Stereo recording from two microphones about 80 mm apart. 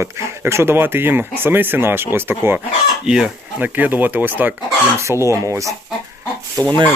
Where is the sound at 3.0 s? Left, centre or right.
Centre.